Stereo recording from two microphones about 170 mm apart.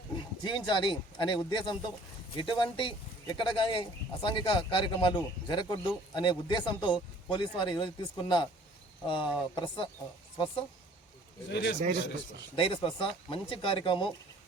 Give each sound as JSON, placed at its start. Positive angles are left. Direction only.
{"t": 0.4, "sound": "speech", "side_deg": 25}
{"t": 11.4, "sound": "speech", "side_deg": 90}
{"t": 12.5, "sound": "speech", "side_deg": 30}